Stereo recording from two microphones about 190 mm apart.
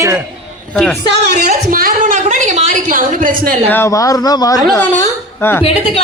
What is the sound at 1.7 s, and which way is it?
A woman's voice, 50° right (ahead or behind).